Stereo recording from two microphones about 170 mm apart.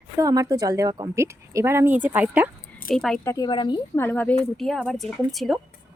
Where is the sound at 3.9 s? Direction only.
10° left (ahead or behind).